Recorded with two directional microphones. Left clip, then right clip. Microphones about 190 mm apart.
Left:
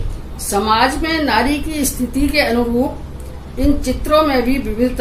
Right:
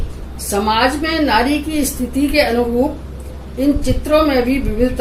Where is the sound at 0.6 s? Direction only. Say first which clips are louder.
Even; 20° left (ahead or behind).